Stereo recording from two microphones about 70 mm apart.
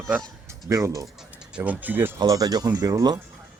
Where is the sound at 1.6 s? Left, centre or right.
Right.